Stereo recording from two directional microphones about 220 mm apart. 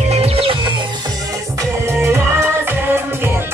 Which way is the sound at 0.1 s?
25° right (ahead or behind).